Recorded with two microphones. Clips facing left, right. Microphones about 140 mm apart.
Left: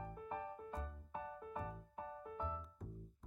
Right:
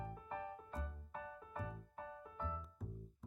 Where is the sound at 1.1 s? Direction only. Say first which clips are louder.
Left 2 dB; 25° left (ahead or behind).